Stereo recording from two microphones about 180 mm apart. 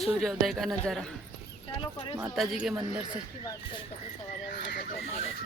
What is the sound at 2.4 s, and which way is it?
Speech, 5° right (ahead or behind).